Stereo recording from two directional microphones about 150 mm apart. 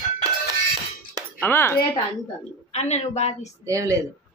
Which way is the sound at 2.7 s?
45° left (ahead or behind).